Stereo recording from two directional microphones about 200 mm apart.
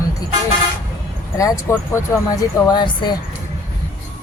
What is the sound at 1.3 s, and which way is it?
Speech, 15° left (ahead or behind).